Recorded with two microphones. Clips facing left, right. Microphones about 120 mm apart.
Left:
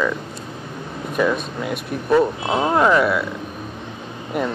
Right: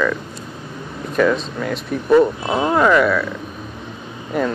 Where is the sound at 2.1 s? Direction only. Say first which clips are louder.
Right 3 dB; 5° left (ahead or behind).